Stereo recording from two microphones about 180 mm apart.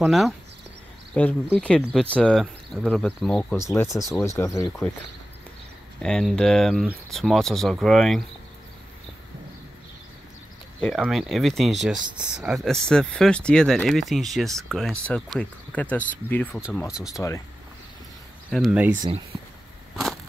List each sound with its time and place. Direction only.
0.0 s speech: centre (ahead or behind)
3.5 s speech: 15° left (ahead or behind)
4.6 s speech: 5° left (ahead or behind)
6.0 s speech: 5° left (ahead or behind)
10.8 s speech: 5° left (ahead or behind)
16.9 s speech: centre (ahead or behind)
18.5 s speech: centre (ahead or behind)